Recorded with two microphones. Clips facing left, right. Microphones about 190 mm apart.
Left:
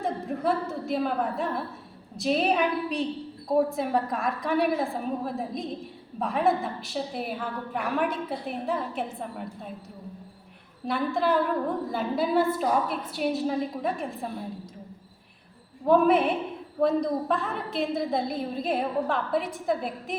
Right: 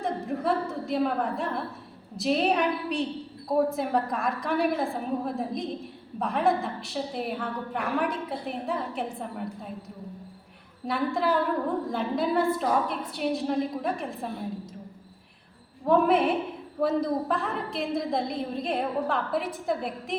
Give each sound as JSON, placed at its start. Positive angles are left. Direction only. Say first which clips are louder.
{"t": 0.0, "sound": "a woman's voice", "louder": "left 1 dB", "side_deg": 0}
{"t": 10.8, "sound": "a woman's voice", "louder": "left 1 dB", "side_deg": 0}
{"t": 15.9, "sound": "a woman's voice", "louder": "left 1 dB", "side_deg": 0}